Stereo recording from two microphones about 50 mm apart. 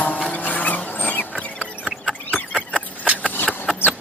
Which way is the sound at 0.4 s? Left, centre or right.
Left.